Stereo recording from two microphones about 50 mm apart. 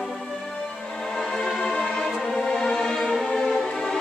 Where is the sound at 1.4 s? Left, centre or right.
Centre.